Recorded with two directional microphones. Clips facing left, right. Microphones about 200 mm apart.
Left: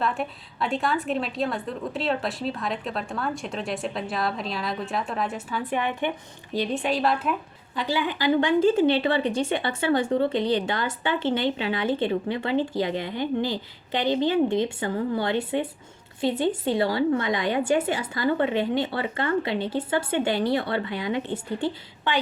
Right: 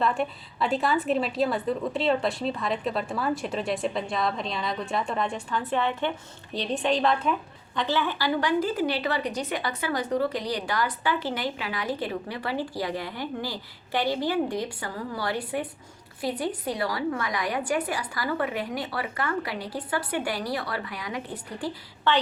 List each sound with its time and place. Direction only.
0.0 s a woman's voice: centre (ahead or behind); by 21.7 s 25° left (ahead or behind)
22.1 s a woman's voice: 15° left (ahead or behind)